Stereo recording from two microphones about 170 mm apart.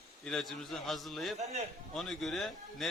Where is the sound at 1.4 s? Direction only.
40° right (ahead or behind).